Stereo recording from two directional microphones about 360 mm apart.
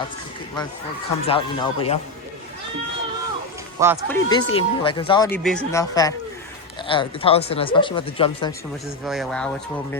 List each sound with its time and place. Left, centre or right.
1.3 s speech: centre
3.8 s speech: centre
4.1 s speech: centre
9.0 s speech: centre